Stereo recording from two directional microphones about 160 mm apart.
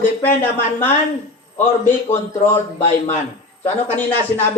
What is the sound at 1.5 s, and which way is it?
Speech, 40° left (ahead or behind).